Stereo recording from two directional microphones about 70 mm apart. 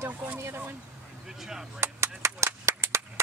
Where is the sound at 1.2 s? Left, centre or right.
Centre.